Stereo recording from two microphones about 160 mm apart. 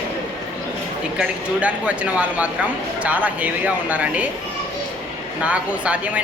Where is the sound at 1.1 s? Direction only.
5° right (ahead or behind).